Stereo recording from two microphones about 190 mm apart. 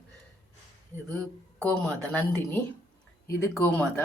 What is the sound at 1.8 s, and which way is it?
Speech, 10° left (ahead or behind).